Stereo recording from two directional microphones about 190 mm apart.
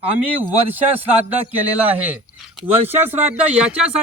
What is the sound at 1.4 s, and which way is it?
A man's voice, 10° right (ahead or behind).